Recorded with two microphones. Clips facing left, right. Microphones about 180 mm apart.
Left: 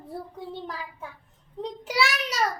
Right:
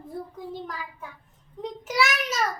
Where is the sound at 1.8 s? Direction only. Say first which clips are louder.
Right 1 dB; 30° left (ahead or behind).